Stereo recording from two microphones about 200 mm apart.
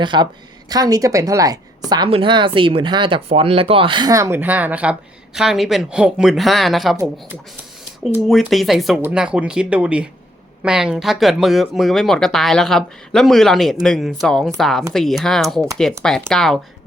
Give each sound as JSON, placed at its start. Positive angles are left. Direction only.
{"t": 0.0, "sound": "a woman's voice", "side_deg": -25}
{"t": 6.9, "sound": "a woman's voice", "side_deg": -15}
{"t": 8.0, "sound": "speech", "side_deg": 0}